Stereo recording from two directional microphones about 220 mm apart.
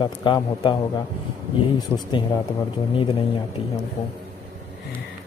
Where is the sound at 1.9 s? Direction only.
10° left (ahead or behind).